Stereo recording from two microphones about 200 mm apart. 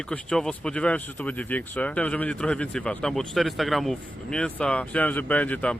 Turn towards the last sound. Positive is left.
turn(degrees=5)  # may be behind; listen again after turning